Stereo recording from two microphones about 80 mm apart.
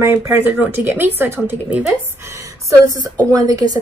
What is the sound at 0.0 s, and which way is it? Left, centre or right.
Speech, right.